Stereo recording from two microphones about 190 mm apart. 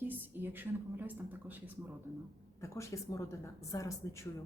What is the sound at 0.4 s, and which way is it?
Speech, 10° right (ahead or behind).